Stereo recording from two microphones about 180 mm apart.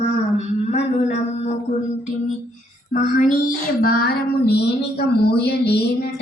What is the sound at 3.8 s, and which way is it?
Speech, 60° left (ahead or behind).